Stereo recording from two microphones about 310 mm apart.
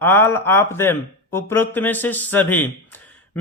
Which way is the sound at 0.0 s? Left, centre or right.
Centre.